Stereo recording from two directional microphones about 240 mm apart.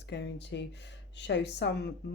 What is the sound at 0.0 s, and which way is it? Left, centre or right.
Speech, left.